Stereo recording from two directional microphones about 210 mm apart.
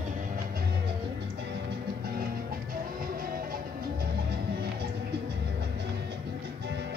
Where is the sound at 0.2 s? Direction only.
45° right (ahead or behind).